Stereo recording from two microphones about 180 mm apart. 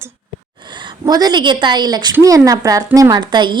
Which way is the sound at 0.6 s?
25° right (ahead or behind).